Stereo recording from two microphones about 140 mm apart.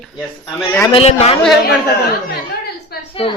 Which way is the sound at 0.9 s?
45° left (ahead or behind).